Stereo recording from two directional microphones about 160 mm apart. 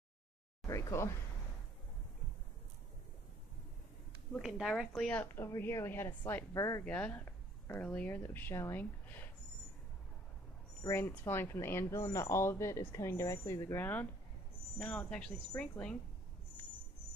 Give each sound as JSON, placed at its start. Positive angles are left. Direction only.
{"t": 0.7, "sound": "speech", "side_deg": 20}
{"t": 4.4, "sound": "speech", "side_deg": 0}
{"t": 6.8, "sound": "speech", "side_deg": 10}
{"t": 10.8, "sound": "speech", "side_deg": 15}